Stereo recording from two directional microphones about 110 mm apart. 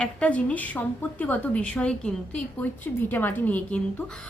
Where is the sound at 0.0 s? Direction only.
10° left (ahead or behind).